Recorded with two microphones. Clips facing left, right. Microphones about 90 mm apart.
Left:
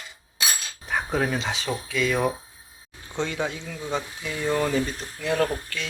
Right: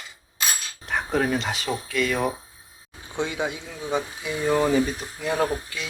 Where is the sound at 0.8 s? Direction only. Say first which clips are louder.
Right 1 dB; centre (ahead or behind).